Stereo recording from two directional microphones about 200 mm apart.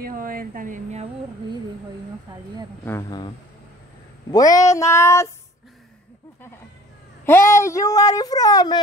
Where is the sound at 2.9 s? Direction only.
15° left (ahead or behind).